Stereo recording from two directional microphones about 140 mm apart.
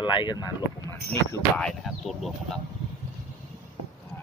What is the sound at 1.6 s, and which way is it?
Speech, centre (ahead or behind).